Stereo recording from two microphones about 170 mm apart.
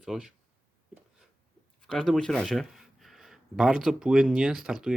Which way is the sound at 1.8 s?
5° left (ahead or behind).